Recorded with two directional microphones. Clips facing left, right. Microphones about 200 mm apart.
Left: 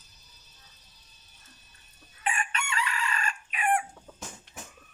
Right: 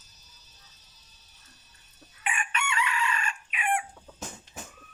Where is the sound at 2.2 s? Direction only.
35° left (ahead or behind).